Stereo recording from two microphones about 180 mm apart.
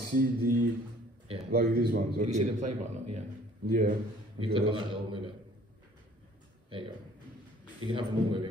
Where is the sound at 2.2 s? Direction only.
40° right (ahead or behind).